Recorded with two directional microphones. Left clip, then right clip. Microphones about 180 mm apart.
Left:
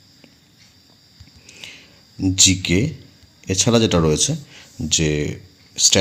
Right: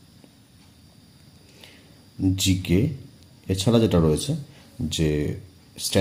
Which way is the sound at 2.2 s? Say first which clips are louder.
Left 8 dB; 15° left (ahead or behind).